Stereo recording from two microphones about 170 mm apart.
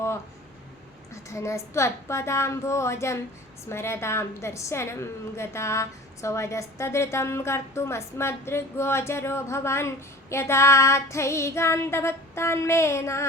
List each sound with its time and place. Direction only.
1.1 s a woman's voice: 15° left (ahead or behind)